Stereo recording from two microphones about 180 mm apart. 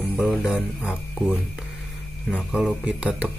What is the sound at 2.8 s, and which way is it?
Speech, 5° right (ahead or behind).